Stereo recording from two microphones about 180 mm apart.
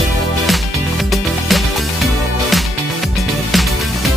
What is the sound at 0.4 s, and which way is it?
Music, centre (ahead or behind).